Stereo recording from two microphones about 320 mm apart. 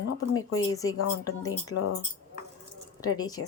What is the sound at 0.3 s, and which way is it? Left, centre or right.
Speech, left.